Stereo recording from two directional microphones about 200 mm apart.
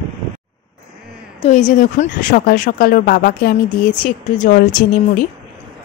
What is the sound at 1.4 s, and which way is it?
Speech, 35° left (ahead or behind).